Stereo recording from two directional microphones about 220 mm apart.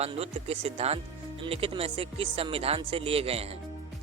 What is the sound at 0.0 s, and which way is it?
Speech, 25° right (ahead or behind).